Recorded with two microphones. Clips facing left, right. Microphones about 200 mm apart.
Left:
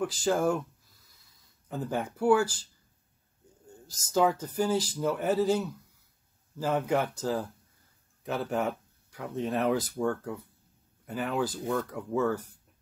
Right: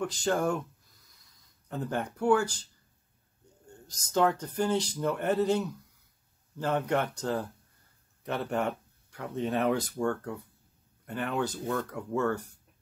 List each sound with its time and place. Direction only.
0.0 s speech: 5° left (ahead or behind)
1.7 s speech: centre (ahead or behind)
3.6 s speech: 5° left (ahead or behind)